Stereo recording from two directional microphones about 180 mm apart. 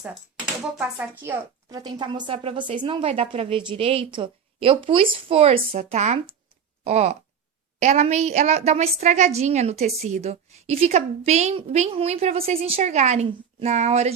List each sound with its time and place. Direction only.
0.8 s a woman's voice: 10° right (ahead or behind); by 14.1 s 35° right (ahead or behind)